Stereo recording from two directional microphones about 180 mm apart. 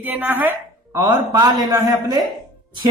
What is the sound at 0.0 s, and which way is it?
Speech, 10° right (ahead or behind).